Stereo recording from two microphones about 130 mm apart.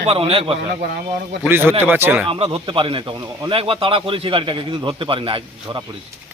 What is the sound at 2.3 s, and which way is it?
A man's voice, 45° right (ahead or behind).